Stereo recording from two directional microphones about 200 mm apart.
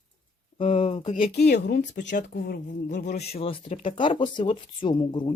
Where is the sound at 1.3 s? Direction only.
55° left (ahead or behind).